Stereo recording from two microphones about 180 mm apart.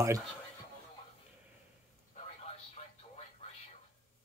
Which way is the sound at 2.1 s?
35° left (ahead or behind).